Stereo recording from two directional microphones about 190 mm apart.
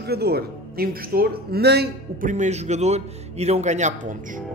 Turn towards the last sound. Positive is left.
turn(degrees=-40)  # may be behind; listen again after turning